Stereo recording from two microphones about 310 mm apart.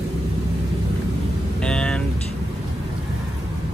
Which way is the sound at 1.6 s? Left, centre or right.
Centre.